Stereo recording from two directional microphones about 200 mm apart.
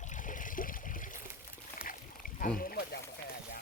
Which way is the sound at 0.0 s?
40° left (ahead or behind).